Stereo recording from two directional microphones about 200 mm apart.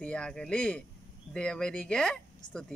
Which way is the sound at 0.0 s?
5° left (ahead or behind).